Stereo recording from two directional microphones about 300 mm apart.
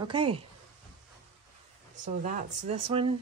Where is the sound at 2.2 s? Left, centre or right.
Right.